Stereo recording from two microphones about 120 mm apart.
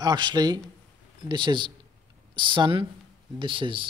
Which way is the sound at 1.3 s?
40° right (ahead or behind).